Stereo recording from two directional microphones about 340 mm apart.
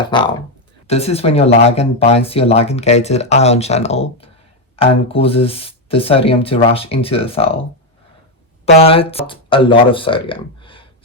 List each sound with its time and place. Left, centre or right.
0.0 s speech: centre
8.6 s speech: centre